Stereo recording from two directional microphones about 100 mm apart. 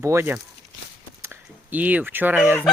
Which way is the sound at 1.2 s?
20° right (ahead or behind).